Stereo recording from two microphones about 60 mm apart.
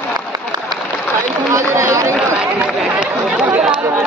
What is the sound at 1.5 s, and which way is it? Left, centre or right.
Run, right.